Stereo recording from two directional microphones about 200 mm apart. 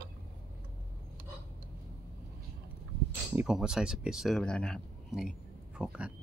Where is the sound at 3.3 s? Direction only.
5° right (ahead or behind).